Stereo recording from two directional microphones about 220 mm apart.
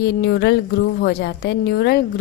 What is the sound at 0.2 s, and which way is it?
A woman's voice, 50° left (ahead or behind).